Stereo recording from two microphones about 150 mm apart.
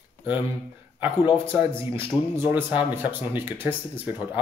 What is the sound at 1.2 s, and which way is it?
Speech, 35° left (ahead or behind).